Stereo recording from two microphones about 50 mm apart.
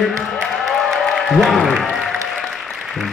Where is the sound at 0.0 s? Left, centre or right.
Centre.